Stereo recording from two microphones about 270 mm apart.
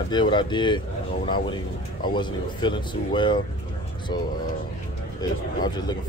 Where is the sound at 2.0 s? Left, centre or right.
Centre.